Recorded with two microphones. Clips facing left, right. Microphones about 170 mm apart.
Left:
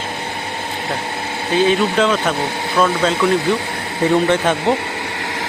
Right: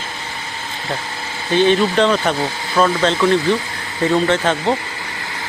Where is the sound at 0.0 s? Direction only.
60° left (ahead or behind).